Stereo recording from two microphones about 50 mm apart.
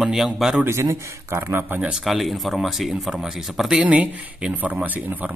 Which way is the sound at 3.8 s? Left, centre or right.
Right.